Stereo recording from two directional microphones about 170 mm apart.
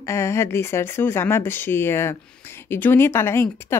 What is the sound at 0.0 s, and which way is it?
Speech, 15° left (ahead or behind).